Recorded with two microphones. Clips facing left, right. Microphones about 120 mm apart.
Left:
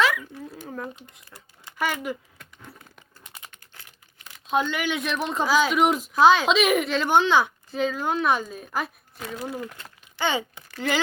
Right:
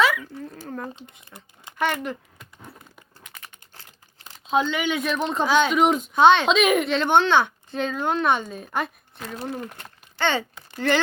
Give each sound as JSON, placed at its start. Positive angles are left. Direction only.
{"t": 0.0, "sound": "a sound", "side_deg": 0}
{"t": 1.3, "sound": "speech", "side_deg": -5}
{"t": 1.8, "sound": "speech", "side_deg": 5}
{"t": 4.4, "sound": "speech", "side_deg": 5}
{"t": 9.4, "sound": "speech", "side_deg": -25}
{"t": 9.8, "sound": "a sound", "side_deg": 10}
{"t": 10.8, "sound": "speech", "side_deg": 10}